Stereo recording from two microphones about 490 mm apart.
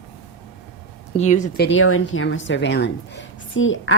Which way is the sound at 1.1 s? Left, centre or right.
Centre.